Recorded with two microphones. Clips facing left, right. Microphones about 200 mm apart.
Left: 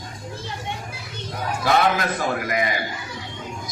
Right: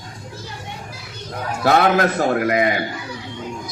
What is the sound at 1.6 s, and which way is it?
A man's voice, 60° right (ahead or behind).